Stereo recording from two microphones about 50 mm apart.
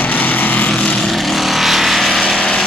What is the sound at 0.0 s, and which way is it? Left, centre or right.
Vehicle, left.